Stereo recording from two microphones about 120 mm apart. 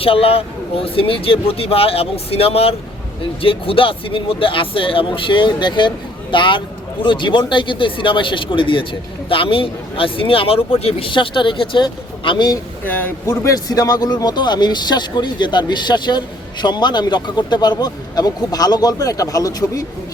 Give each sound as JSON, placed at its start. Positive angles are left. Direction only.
{"t": 0.0, "sound": "speech", "side_deg": 50}
{"t": 12.8, "sound": "a man's voice", "side_deg": 15}
{"t": 13.3, "sound": "speech", "side_deg": 30}